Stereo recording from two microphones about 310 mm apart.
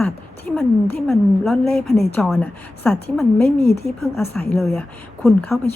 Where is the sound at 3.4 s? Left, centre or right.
Left.